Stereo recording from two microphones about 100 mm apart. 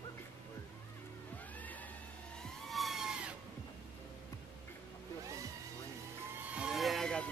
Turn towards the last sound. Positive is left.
turn(degrees=5)  # may be behind; listen again after turning